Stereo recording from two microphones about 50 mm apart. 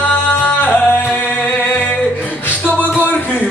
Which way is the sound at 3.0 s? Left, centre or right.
Left.